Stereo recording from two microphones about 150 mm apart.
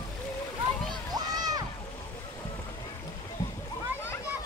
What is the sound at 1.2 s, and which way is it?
Music, 25° right (ahead or behind).